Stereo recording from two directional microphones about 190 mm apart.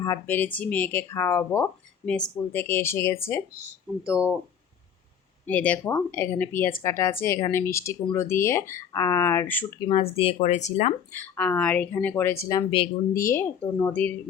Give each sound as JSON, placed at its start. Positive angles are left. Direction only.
{"t": 0.0, "sound": "speech", "side_deg": 15}
{"t": 4.1, "sound": "speech", "side_deg": -5}
{"t": 5.5, "sound": "speech", "side_deg": 10}
{"t": 9.9, "sound": "speech", "side_deg": 30}
{"t": 11.2, "sound": "speech", "side_deg": 10}